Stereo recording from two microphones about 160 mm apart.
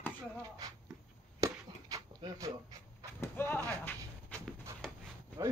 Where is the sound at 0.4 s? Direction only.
25° right (ahead or behind).